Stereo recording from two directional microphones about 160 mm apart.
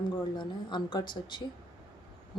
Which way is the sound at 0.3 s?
30° left (ahead or behind).